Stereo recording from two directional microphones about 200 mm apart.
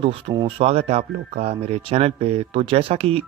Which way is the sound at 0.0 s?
25° right (ahead or behind).